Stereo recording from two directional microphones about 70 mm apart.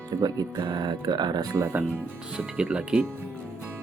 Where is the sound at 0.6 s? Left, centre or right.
Right.